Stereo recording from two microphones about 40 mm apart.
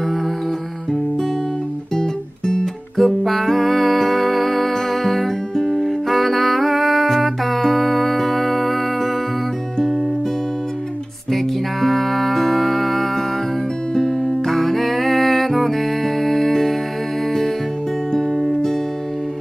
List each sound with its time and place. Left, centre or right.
2.0 s music: centre
3.0 s music: centre
11.3 s music: centre
13.9 s music: centre
14.3 s music: centre
18.3 s music: centre